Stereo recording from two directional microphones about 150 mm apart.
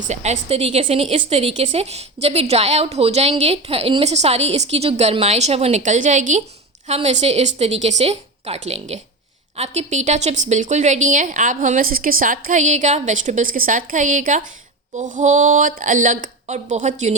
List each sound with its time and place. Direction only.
0.1 s a woman's voice: 45° right (ahead or behind)